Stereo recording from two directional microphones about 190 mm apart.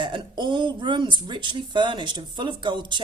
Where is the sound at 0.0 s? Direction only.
25° right (ahead or behind).